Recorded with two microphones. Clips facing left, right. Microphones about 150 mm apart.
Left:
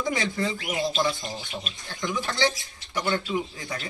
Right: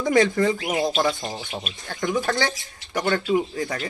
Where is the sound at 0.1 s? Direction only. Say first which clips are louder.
Right 9 dB; 50° right (ahead or behind).